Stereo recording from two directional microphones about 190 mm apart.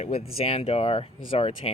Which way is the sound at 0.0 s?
35° left (ahead or behind).